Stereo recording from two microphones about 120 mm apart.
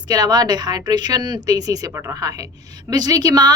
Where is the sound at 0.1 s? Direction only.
35° right (ahead or behind).